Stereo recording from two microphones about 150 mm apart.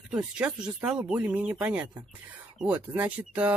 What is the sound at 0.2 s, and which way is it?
Speech, 10° right (ahead or behind).